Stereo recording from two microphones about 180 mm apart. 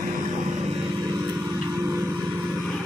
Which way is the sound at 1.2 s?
15° right (ahead or behind).